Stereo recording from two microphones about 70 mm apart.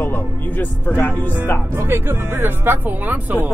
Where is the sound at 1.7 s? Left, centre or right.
Right.